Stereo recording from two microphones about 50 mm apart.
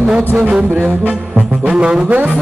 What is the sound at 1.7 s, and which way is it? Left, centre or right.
Music, centre.